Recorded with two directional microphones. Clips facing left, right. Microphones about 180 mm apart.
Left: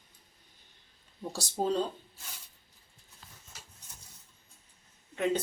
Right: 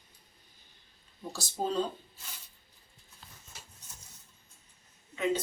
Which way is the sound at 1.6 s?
45° left (ahead or behind).